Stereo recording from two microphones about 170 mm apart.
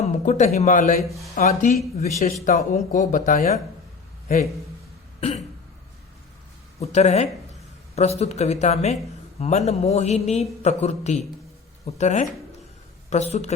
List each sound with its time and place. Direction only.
0.0 s speech: 45° left (ahead or behind)
1.0 s speech: centre (ahead or behind)
1.4 s speech: 40° left (ahead or behind)
6.7 s a man's voice: 40° left (ahead or behind)